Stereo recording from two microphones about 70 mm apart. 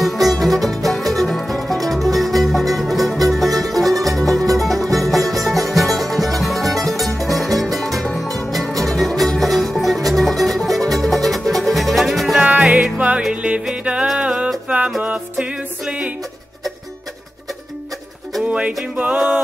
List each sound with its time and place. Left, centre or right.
0.0 s music: centre